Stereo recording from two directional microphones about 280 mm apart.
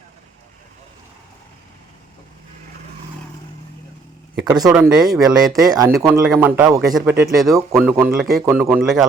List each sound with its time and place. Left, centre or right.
4.4 s speech: centre
4.7 s a man's voice: centre